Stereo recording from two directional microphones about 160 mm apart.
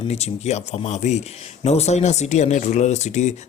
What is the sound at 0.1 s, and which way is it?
Speech, 45° left (ahead or behind).